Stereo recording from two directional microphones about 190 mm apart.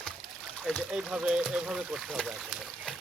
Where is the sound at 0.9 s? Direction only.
5° right (ahead or behind).